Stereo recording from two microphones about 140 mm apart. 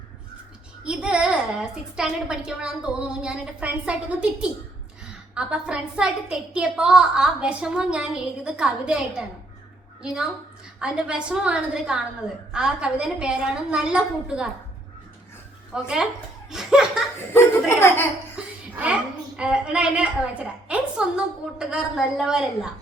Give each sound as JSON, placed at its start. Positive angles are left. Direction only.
{"t": 0.9, "sound": "a woman's voice", "side_deg": -5}
{"t": 15.7, "sound": "a woman's voice", "side_deg": -10}
{"t": 16.5, "sound": "laughter", "side_deg": -5}
{"t": 17.2, "sound": "speech", "side_deg": 15}
{"t": 18.4, "sound": "laughter", "side_deg": -5}
{"t": 19.4, "sound": "a woman's voice", "side_deg": -5}